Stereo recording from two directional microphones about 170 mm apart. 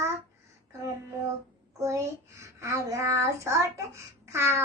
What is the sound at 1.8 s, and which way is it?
Child singing, 15° right (ahead or behind).